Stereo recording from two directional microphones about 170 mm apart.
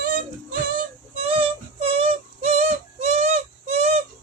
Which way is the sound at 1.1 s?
35° right (ahead or behind).